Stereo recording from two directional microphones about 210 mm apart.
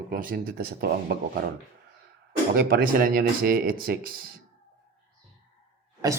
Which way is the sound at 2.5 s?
45° right (ahead or behind).